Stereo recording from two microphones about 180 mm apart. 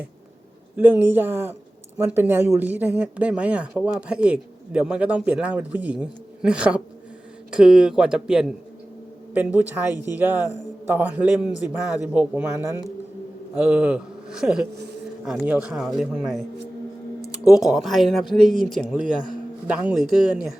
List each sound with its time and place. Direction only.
0.8 s a man's voice: 10° right (ahead or behind)
17.7 s speech: centre (ahead or behind)
19.1 s a man's voice: 25° left (ahead or behind)
19.6 s speech: 5° right (ahead or behind)